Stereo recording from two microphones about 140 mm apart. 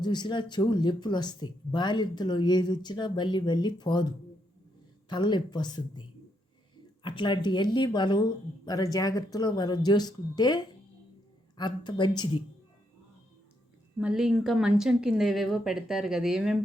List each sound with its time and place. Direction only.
0.0 s speech: 30° left (ahead or behind)
14.0 s a woman's voice: 5° right (ahead or behind)